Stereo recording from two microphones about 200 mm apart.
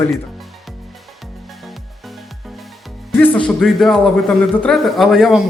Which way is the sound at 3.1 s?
5° left (ahead or behind).